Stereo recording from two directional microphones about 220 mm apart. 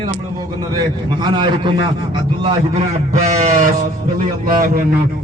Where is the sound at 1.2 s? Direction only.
20° right (ahead or behind).